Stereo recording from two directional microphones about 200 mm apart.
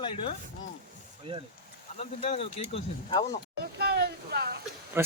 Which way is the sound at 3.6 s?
50° right (ahead or behind).